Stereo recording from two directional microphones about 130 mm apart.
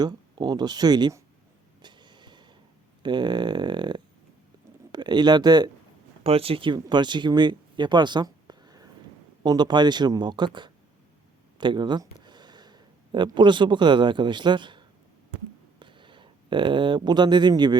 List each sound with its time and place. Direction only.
0.0 s speech: 35° right (ahead or behind)
1.8 s a sound: 35° right (ahead or behind)
3.0 s speech: 35° right (ahead or behind)
6.2 s speech: 45° right (ahead or behind)
6.7 s speech: 30° right (ahead or behind)